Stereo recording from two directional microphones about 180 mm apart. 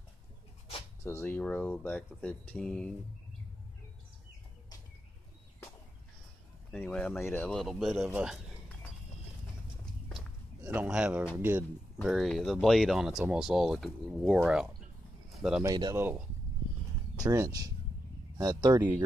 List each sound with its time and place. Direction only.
1.0 s speech: 15° left (ahead or behind)
6.7 s speech: 5° left (ahead or behind)
10.6 s a man's voice: 10° right (ahead or behind)
12.0 s speech: centre (ahead or behind)
15.3 s bird: centre (ahead or behind)
15.6 s speech: 20° right (ahead or behind)
17.2 s speech: 20° right (ahead or behind)